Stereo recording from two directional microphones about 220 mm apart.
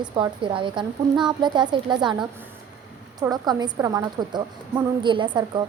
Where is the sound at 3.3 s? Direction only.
20° right (ahead or behind).